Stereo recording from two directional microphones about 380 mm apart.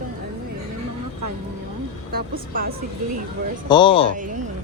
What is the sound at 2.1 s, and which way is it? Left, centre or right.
Speech, right.